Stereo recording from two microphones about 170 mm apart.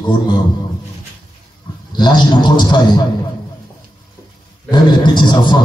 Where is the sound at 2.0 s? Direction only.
25° left (ahead or behind).